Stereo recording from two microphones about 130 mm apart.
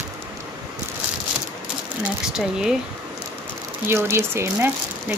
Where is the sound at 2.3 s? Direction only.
5° right (ahead or behind).